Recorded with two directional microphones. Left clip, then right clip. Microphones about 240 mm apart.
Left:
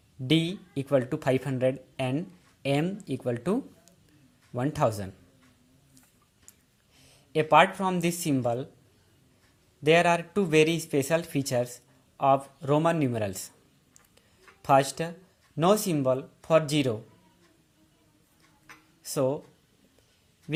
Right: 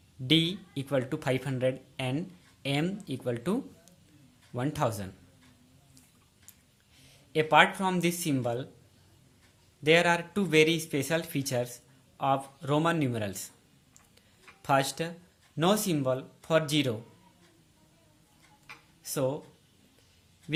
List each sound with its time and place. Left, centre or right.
0.3 s speech: centre
6.9 s speech: centre
9.8 s speech: centre
14.6 s speech: centre
19.0 s speech: centre